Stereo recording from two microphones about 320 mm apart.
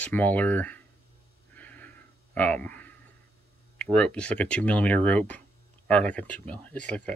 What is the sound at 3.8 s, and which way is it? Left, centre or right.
Speech, centre.